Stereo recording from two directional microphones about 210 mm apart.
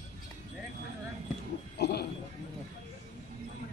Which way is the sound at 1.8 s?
50° left (ahead or behind).